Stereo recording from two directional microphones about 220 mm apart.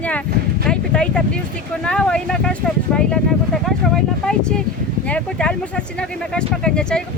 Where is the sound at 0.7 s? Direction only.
5° left (ahead or behind).